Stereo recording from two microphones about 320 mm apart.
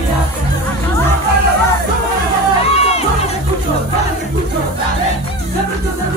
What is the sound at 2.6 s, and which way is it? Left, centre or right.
Crowd, centre.